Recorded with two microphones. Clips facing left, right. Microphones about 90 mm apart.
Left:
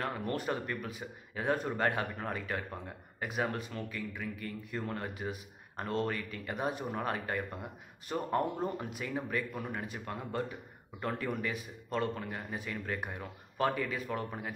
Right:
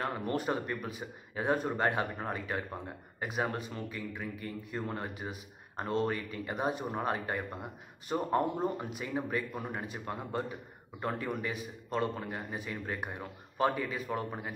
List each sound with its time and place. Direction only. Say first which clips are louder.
0.0 s speech: right 2 dB; 15° right (ahead or behind)